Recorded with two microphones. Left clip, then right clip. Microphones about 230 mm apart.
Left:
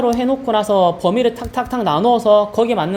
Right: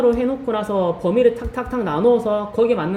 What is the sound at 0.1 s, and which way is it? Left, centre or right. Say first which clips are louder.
Speech: left 3 dB; left.